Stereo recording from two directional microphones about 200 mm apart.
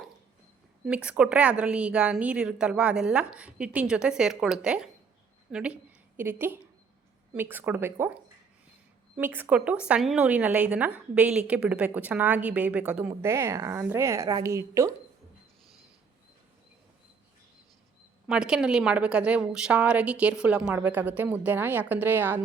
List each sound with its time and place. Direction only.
0.9 s a woman's voice: 5° right (ahead or behind)
18.3 s a woman's voice: 5° right (ahead or behind)